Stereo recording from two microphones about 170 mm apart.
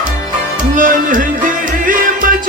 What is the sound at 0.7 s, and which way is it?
Music, 50° right (ahead or behind).